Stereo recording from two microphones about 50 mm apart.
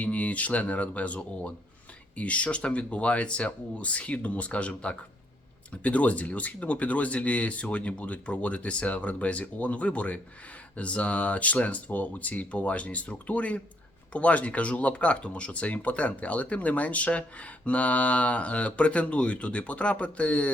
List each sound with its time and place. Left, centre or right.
0.0 s speech: left